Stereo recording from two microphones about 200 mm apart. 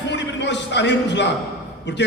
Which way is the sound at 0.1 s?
60° left (ahead or behind).